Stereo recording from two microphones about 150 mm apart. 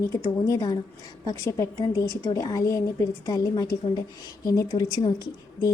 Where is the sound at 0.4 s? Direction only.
25° left (ahead or behind).